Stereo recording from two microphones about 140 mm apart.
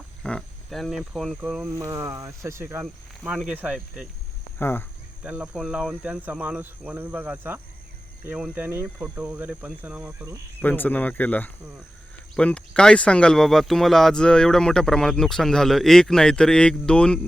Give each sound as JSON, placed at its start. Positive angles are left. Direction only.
{"t": 0.2, "sound": "speech", "side_deg": 5}
{"t": 1.7, "sound": "speech", "side_deg": -20}
{"t": 2.8, "sound": "speech", "side_deg": -5}
{"t": 4.5, "sound": "speech", "side_deg": 15}
{"t": 5.2, "sound": "speech", "side_deg": -10}
{"t": 10.6, "sound": "speech", "side_deg": 10}